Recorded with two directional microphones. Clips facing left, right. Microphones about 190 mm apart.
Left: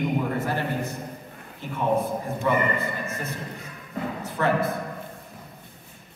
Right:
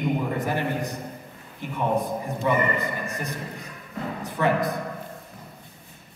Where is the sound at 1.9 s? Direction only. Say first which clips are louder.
Left 1 dB; 15° right (ahead or behind).